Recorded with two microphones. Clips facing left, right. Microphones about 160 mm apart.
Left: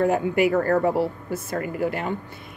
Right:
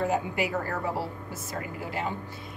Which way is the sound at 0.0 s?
60° left (ahead or behind).